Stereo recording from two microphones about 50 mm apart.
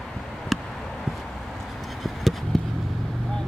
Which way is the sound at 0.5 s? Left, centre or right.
Centre.